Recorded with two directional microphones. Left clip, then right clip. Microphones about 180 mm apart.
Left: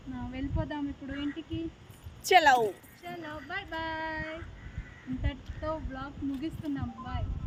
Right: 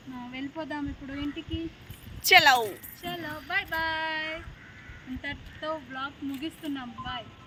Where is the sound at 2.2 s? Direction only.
40° left (ahead or behind).